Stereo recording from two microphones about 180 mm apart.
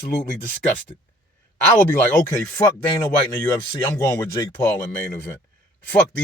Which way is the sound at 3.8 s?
15° left (ahead or behind).